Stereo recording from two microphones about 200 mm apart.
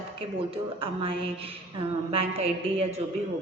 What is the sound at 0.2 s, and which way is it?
A woman's voice, 25° right (ahead or behind).